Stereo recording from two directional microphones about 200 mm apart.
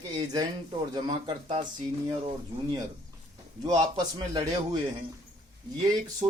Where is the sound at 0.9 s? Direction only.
25° right (ahead or behind).